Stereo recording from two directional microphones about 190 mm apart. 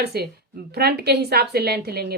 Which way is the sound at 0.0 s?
55° right (ahead or behind).